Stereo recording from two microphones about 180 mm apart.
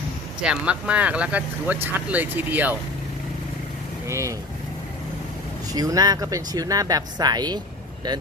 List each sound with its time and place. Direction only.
0.4 s speech: 5° right (ahead or behind)
4.0 s speech: 15° right (ahead or behind)
5.7 s speech: 20° right (ahead or behind)